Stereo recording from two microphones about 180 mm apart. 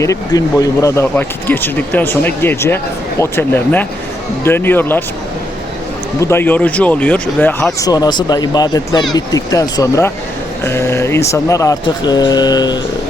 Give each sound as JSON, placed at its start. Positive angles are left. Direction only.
{"t": 0.0, "sound": "speech", "side_deg": 20}
{"t": 6.1, "sound": "speech", "side_deg": 15}
{"t": 7.8, "sound": "speech", "side_deg": 20}